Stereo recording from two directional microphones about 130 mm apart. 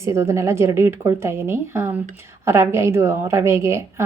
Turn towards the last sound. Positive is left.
turn(degrees=-20)  # may be behind; listen again after turning